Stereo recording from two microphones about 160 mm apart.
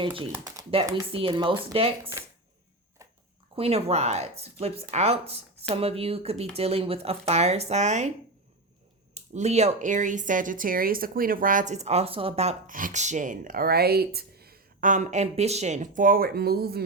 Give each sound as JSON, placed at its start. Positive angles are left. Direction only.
{"t": 0.3, "sound": "speech", "side_deg": -20}
{"t": 1.1, "sound": "speech", "side_deg": -30}
{"t": 3.0, "sound": "a sound", "side_deg": -20}
{"t": 3.5, "sound": "speech", "side_deg": -40}
{"t": 9.1, "sound": "speech", "side_deg": -45}
{"t": 12.7, "sound": "speech", "side_deg": -50}